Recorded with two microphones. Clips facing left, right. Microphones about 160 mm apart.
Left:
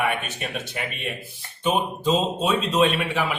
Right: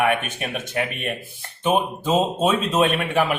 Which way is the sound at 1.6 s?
50° right (ahead or behind).